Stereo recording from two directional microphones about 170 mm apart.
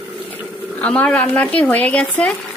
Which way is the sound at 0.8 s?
5° left (ahead or behind).